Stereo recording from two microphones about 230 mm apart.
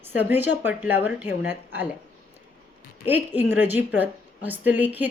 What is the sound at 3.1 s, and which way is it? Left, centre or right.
A woman's voice, centre.